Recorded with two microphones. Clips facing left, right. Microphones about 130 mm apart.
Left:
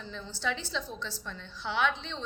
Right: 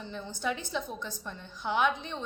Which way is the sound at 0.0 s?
15° right (ahead or behind).